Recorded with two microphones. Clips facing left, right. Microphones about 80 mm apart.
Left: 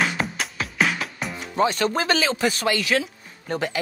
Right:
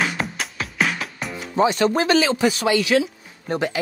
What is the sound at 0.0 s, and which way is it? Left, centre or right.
Music, centre.